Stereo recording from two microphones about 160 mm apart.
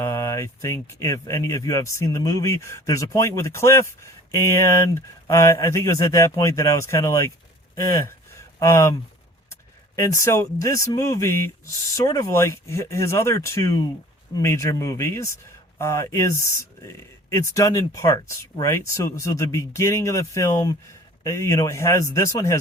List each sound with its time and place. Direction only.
0.0 s speech: 20° left (ahead or behind)
8.0 s a sound: 15° left (ahead or behind)
9.5 s speech: 20° left (ahead or behind)